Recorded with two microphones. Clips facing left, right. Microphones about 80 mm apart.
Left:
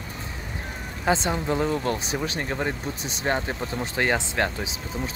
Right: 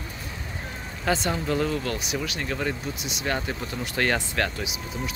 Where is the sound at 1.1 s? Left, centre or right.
Left.